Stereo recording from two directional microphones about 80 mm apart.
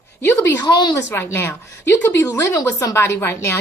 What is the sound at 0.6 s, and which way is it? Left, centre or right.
Speech, left.